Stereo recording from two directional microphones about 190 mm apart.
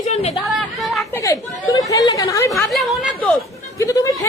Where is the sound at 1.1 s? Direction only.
20° left (ahead or behind).